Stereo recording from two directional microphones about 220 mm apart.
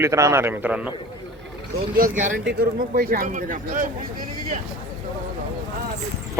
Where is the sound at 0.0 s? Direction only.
15° right (ahead or behind).